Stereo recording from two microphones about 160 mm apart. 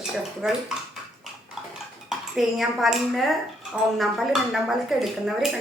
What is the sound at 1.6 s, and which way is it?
Dishes, centre (ahead or behind).